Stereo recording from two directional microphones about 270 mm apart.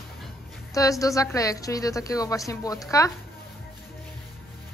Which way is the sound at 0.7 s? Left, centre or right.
Centre.